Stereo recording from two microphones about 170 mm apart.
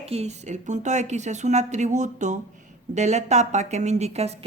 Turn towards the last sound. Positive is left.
turn(degrees=-40)  # may be behind; listen again after turning